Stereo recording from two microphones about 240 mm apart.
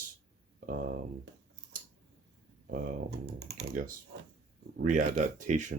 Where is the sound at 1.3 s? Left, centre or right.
Right.